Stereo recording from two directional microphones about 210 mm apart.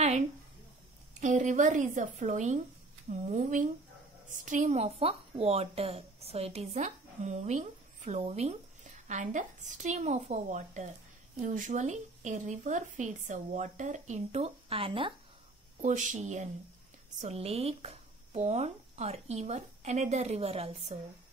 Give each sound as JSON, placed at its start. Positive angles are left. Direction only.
{"t": 1.2, "sound": "speech", "side_deg": -35}
{"t": 15.8, "sound": "speech", "side_deg": -35}